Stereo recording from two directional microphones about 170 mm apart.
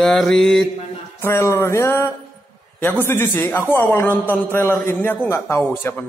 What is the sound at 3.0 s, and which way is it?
A man's voice, 10° left (ahead or behind).